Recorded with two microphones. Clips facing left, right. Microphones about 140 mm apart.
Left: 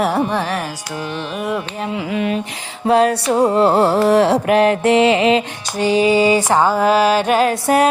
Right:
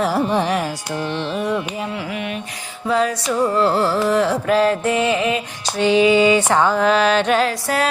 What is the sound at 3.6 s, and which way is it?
Music, 60° left (ahead or behind).